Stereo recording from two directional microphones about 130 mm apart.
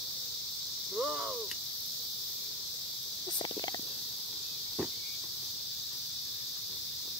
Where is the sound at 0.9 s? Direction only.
5° right (ahead or behind).